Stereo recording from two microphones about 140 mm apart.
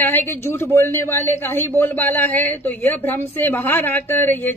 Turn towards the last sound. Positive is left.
turn(degrees=15)  # may be behind; listen again after turning